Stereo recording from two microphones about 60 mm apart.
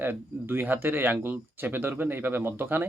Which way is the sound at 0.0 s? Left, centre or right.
Right.